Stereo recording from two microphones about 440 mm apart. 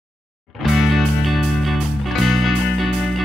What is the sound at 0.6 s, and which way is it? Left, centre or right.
Music, centre.